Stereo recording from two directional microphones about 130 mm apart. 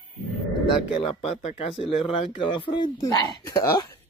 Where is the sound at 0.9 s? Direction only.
45° left (ahead or behind).